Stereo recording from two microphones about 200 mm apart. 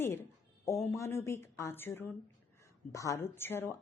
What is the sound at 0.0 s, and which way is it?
A woman's voice, 10° left (ahead or behind).